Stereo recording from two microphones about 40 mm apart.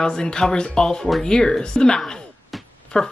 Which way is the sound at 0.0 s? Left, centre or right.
Centre.